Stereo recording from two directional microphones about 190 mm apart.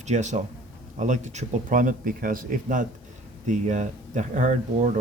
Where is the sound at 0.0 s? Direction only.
40° right (ahead or behind).